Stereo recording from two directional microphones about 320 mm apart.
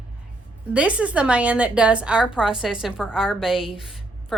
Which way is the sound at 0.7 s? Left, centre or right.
Centre.